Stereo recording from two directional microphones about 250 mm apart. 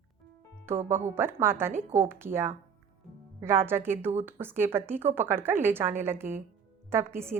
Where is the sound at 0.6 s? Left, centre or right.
Centre.